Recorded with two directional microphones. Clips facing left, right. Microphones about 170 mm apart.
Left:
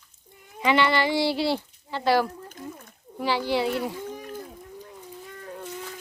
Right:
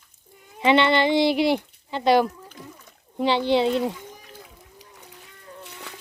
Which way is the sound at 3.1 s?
25° right (ahead or behind).